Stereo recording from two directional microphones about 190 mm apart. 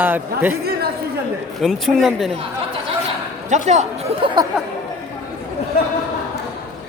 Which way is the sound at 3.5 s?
40° right (ahead or behind).